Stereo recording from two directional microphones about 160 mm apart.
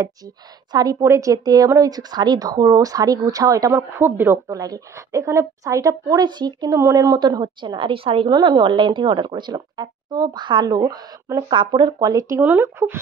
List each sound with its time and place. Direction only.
0.7 s speech: 25° right (ahead or behind)